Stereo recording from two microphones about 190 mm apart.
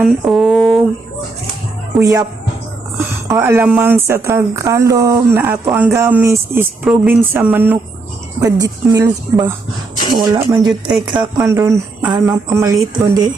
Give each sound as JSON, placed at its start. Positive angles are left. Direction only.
{"t": 0.0, "sound": "speech", "side_deg": 0}
{"t": 2.0, "sound": "speech", "side_deg": -15}
{"t": 3.2, "sound": "speech", "side_deg": -15}